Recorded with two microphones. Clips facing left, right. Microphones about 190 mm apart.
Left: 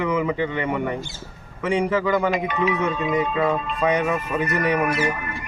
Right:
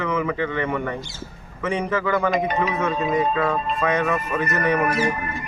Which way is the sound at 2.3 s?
35° right (ahead or behind).